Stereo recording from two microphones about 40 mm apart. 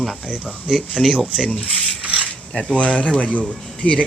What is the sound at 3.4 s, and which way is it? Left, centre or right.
Speech, left.